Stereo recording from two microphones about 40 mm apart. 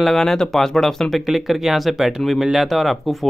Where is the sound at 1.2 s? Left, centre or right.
Centre.